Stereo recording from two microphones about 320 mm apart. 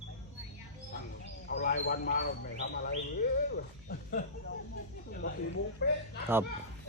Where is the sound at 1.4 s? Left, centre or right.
Left.